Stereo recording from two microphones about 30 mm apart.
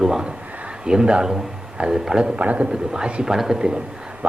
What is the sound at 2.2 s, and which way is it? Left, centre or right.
Speech, right.